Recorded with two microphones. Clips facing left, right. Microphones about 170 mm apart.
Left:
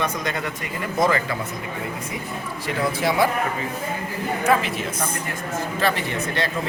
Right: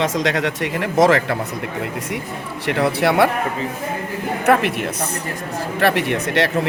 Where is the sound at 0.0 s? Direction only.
90° right.